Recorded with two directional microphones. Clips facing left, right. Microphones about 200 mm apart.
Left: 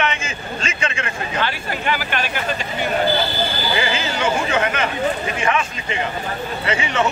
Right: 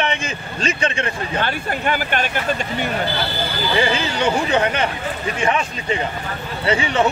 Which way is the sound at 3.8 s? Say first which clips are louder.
Right 4 dB; 35° right (ahead or behind).